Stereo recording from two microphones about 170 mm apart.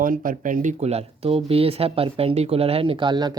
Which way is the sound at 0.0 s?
55° right (ahead or behind).